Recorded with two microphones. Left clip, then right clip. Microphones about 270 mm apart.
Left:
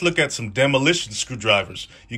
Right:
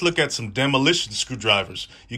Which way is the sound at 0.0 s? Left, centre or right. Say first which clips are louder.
Left 1 dB; centre.